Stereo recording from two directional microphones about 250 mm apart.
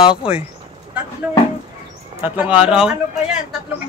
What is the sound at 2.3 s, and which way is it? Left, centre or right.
Speech, centre.